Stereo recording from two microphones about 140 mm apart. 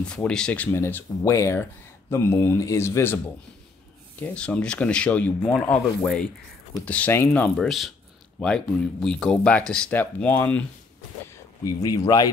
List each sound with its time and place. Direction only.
0.0 s speech: 5° left (ahead or behind)
4.2 s speech: 10° left (ahead or behind)
6.9 s speech: 15° left (ahead or behind)
11.6 s speech: 25° left (ahead or behind)